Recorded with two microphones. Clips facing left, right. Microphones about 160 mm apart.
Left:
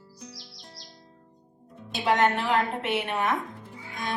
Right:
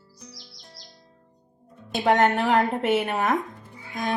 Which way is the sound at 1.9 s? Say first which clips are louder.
Right 3 dB; 50° right (ahead or behind).